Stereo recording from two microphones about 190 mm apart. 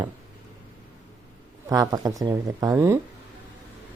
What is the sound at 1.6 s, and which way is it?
Speech, 20° right (ahead or behind).